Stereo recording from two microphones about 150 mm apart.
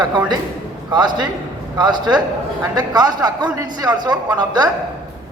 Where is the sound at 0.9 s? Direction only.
30° right (ahead or behind).